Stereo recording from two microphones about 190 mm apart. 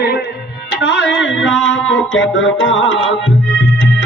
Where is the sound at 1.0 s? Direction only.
70° left (ahead or behind).